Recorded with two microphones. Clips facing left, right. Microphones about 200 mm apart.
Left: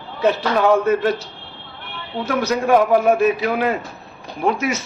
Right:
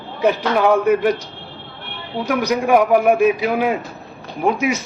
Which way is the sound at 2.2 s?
15° right (ahead or behind).